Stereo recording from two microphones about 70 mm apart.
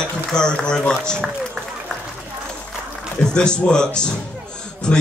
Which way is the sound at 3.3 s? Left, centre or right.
Centre.